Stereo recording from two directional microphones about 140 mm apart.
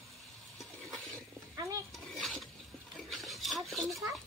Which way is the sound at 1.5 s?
20° right (ahead or behind).